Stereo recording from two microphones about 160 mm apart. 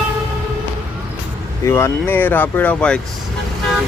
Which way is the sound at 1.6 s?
15° left (ahead or behind).